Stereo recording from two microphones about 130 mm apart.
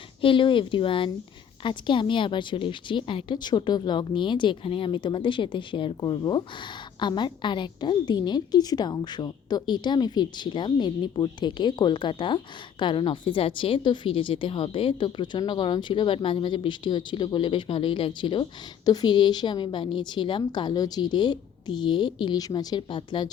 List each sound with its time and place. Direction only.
0.2 s a woman's voice: 40° left (ahead or behind)